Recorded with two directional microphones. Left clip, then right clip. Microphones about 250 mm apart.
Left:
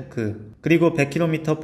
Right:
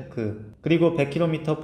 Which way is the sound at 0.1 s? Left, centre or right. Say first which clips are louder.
Left 2 dB; left.